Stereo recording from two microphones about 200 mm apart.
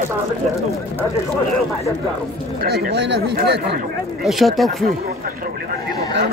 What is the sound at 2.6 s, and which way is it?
Speech, 55° right (ahead or behind).